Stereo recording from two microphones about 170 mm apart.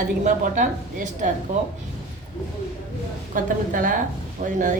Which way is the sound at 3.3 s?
50° right (ahead or behind).